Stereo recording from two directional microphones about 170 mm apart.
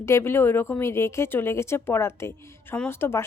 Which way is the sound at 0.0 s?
15° left (ahead or behind).